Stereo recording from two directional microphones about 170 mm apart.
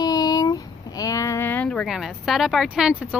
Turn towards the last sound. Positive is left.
turn(degrees=-5)  # may be behind; listen again after turning